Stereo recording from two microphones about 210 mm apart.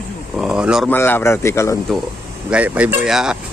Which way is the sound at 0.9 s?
10° left (ahead or behind).